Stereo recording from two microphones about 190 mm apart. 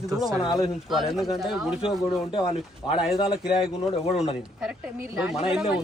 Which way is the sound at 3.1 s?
25° left (ahead or behind).